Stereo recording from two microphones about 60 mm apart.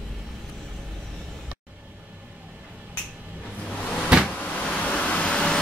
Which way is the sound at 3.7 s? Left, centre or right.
Left.